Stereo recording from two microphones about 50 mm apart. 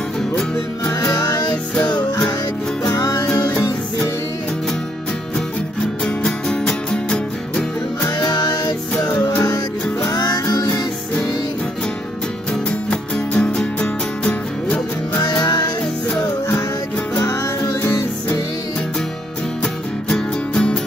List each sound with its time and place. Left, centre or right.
6.0 s music: centre
12.9 s music: left
20.1 s music: centre